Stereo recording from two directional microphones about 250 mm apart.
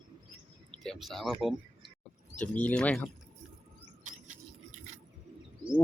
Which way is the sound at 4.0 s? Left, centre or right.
Right.